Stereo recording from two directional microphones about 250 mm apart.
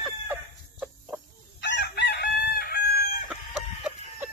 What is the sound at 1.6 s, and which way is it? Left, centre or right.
Chicken, left.